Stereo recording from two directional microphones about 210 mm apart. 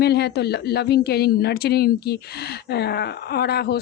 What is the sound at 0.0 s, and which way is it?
A woman's voice, 50° left (ahead or behind).